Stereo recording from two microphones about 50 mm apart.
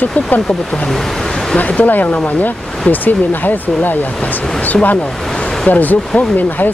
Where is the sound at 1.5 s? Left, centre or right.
Left.